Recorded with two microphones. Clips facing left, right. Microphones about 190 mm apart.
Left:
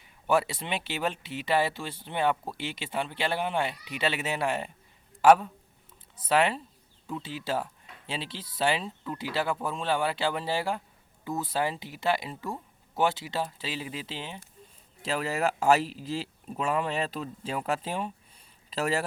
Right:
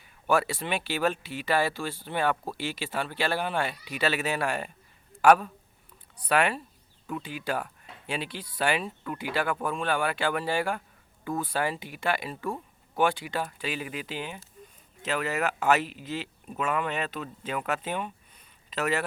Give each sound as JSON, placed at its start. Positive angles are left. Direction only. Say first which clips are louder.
{"t": 0.0, "sound": "a man's voice", "louder": "even", "side_deg": 20}